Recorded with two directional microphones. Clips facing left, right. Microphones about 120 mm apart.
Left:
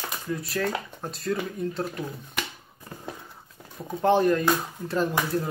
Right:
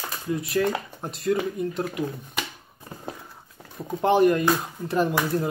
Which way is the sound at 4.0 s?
20° right (ahead or behind).